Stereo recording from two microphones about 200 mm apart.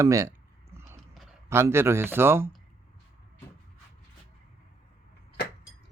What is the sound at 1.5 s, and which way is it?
Speech, 10° right (ahead or behind).